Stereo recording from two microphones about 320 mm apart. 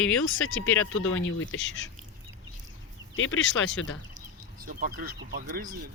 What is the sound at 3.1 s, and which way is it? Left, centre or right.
Speech, left.